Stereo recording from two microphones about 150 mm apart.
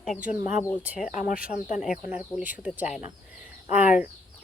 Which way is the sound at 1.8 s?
5° right (ahead or behind).